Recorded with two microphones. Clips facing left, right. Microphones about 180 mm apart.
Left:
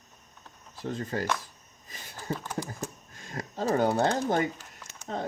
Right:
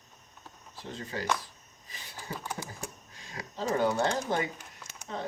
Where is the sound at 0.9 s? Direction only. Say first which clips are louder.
Left 4 dB; 50° left (ahead or behind).